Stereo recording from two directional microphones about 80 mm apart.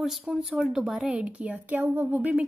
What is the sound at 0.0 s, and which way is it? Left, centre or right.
A woman's voice, centre.